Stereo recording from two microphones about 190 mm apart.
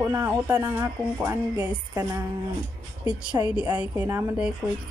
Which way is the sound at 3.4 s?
15° right (ahead or behind).